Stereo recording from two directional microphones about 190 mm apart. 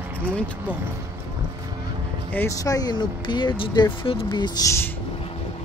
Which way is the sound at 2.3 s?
15° left (ahead or behind).